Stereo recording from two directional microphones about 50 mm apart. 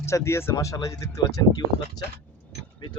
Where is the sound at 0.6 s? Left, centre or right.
Left.